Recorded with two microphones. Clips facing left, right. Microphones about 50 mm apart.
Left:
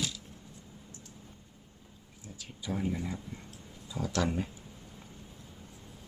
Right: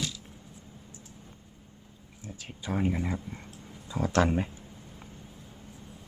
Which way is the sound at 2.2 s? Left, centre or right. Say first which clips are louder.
Right 2 dB; right.